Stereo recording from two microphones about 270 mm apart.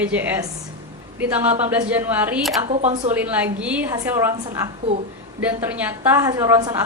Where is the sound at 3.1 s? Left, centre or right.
Centre.